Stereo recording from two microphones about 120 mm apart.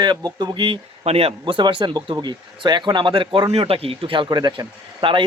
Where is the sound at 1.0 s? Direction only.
55° right (ahead or behind).